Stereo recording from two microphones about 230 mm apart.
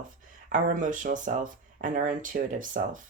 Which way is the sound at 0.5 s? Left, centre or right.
Right.